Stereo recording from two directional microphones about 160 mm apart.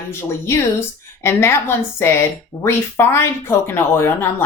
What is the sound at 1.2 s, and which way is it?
Speech, 15° left (ahead or behind).